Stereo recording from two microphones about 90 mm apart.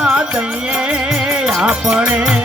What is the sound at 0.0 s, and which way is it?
Music, 10° right (ahead or behind).